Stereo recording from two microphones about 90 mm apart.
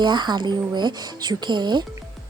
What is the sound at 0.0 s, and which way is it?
Speech, 55° right (ahead or behind).